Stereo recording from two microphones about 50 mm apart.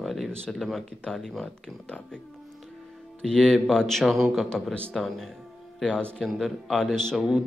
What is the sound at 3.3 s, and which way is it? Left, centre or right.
Speech, centre.